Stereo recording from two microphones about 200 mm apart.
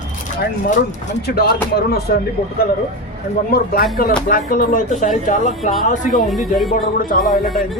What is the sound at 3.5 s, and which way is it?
Speech, 50° left (ahead or behind).